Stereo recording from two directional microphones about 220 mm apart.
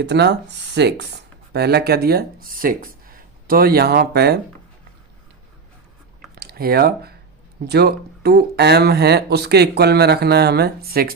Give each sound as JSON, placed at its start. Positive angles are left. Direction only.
{"t": 0.0, "sound": "speech", "side_deg": -50}
{"t": 6.3, "sound": "speech", "side_deg": -45}